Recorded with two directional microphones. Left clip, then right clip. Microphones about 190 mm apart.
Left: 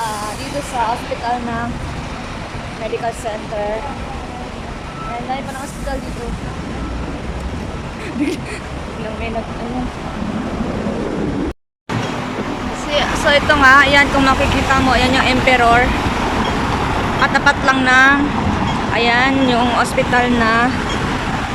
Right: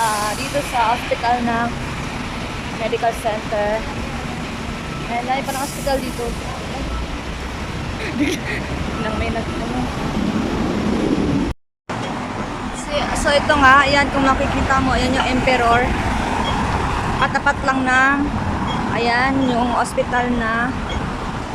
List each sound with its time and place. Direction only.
12.9 s speech: 5° right (ahead or behind)
17.2 s speech: 5° right (ahead or behind)